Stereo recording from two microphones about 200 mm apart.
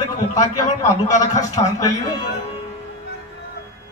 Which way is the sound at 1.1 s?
35° left (ahead or behind).